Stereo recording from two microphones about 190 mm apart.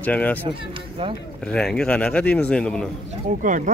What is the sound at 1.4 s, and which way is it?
A man's voice, 5° left (ahead or behind).